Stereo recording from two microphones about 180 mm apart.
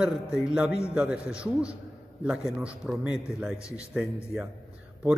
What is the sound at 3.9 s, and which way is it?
Speech, 5° right (ahead or behind).